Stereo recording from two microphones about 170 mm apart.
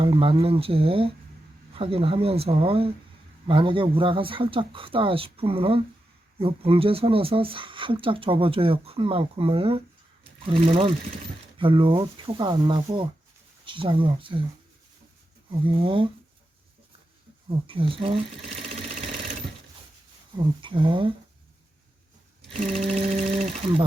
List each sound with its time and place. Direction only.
0.0 s speech: 30° right (ahead or behind)
15.6 s speech: 30° right (ahead or behind)
17.7 s speech: 30° right (ahead or behind)
20.3 s speech: 30° right (ahead or behind)
22.6 s speech: 40° right (ahead or behind)